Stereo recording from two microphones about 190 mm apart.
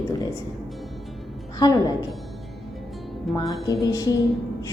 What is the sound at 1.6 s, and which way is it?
Speech, 20° left (ahead or behind).